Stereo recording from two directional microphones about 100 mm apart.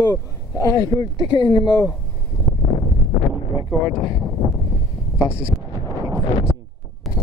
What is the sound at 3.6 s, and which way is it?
Speech, 50° left (ahead or behind).